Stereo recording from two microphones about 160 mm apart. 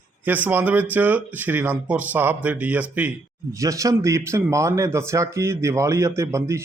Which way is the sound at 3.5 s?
20° right (ahead or behind).